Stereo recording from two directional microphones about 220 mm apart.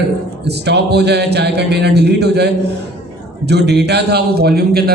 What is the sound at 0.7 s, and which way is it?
A man's voice, 50° right (ahead or behind).